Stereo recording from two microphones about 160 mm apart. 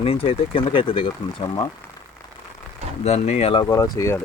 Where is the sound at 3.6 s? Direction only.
20° left (ahead or behind).